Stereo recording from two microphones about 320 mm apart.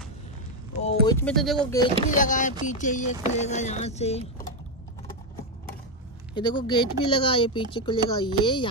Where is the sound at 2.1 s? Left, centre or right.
Left.